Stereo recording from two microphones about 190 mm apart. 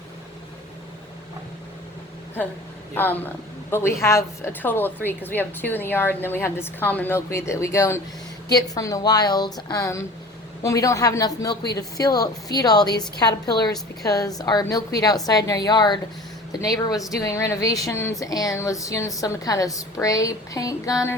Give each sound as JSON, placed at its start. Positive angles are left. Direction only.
{"t": 2.9, "sound": "a woman's voice", "side_deg": 10}